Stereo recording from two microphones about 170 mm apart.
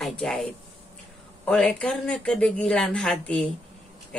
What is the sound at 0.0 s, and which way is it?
Speech, 5° left (ahead or behind).